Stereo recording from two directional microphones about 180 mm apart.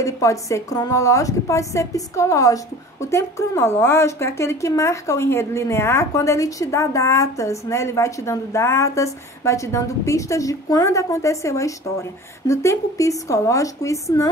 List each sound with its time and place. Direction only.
0.0 s a woman's voice: 15° left (ahead or behind)